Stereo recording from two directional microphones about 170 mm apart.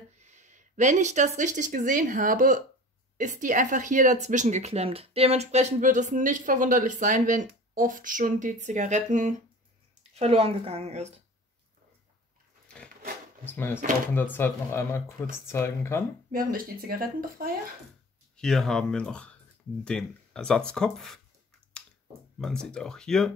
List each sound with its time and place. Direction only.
0.2 s speech: 45° right (ahead or behind)
12.6 s dog: 5° left (ahead or behind)
13.5 s speech: 10° left (ahead or behind)
16.3 s speech: 55° right (ahead or behind)
18.3 s speech: 5° left (ahead or behind)
22.4 s speech: 5° left (ahead or behind)